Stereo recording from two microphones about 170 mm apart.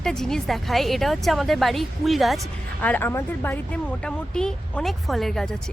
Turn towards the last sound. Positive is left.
turn(degrees=5)  # may be behind; listen again after turning